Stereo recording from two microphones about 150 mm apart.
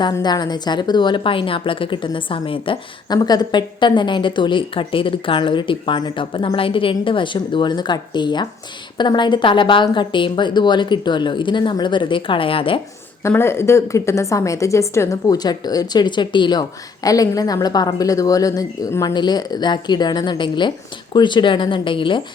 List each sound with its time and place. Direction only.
0.0 s a woman's voice: 30° left (ahead or behind)
13.2 s a woman's voice: 15° left (ahead or behind); by 22.2 s 35° left (ahead or behind)